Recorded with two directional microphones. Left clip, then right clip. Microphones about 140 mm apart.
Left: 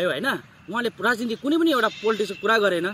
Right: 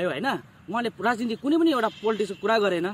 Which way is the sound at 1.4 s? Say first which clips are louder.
Left 1 dB; centre (ahead or behind).